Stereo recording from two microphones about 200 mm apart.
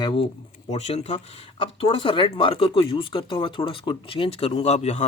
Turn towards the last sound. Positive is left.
turn(degrees=35)  # may be behind; listen again after turning